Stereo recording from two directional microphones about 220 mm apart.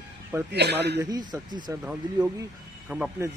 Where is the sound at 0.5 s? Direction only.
50° right (ahead or behind).